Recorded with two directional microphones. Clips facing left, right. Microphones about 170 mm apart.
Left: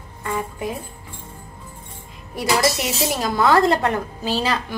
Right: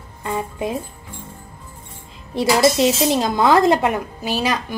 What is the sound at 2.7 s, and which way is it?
Speech, 25° right (ahead or behind).